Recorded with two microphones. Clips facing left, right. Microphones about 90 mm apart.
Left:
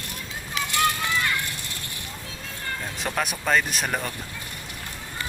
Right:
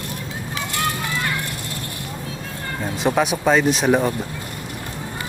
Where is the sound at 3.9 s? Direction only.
15° right (ahead or behind).